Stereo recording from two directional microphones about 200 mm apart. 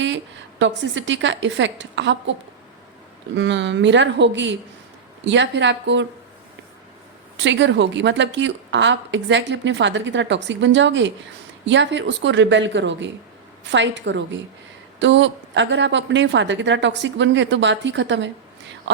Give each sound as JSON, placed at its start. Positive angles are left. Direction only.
{"t": 0.6, "sound": "a woman's voice", "side_deg": -65}
{"t": 3.3, "sound": "a woman's voice", "side_deg": -60}
{"t": 7.3, "sound": "a woman's voice", "side_deg": -65}